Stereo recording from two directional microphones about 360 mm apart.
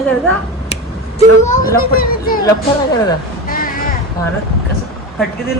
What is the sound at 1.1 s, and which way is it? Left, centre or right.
Speech, centre.